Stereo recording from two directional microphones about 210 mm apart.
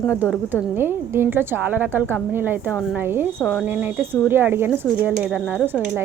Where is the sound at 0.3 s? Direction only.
10° right (ahead or behind).